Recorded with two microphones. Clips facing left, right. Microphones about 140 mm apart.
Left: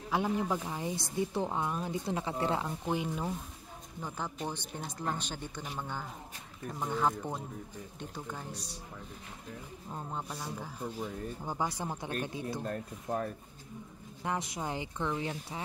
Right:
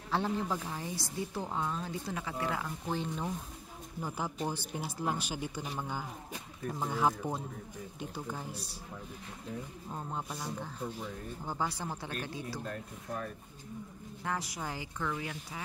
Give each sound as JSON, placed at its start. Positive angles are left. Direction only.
{"t": 0.1, "sound": "a woman's voice", "side_deg": 10}
{"t": 2.9, "sound": "speech", "side_deg": 10}
{"t": 4.0, "sound": "speech", "side_deg": -10}
{"t": 9.8, "sound": "speech", "side_deg": 0}
{"t": 11.4, "sound": "a woman's voice", "side_deg": 15}
{"t": 12.6, "sound": "speech", "side_deg": 40}
{"t": 14.2, "sound": "a woman's voice", "side_deg": 20}